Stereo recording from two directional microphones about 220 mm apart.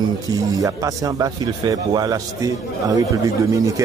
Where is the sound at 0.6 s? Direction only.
15° right (ahead or behind).